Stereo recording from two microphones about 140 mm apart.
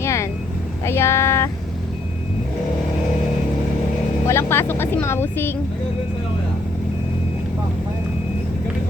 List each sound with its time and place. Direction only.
0.0 s vehicle: 20° left (ahead or behind)
0.9 s a sound: 20° left (ahead or behind)
4.3 s speech: 20° left (ahead or behind)